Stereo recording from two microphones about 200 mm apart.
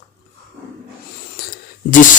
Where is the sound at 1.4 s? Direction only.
50° left (ahead or behind).